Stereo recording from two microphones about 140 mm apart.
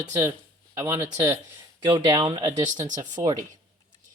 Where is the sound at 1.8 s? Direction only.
35° right (ahead or behind).